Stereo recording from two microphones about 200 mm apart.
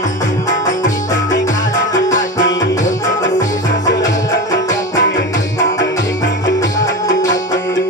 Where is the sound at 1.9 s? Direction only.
15° left (ahead or behind).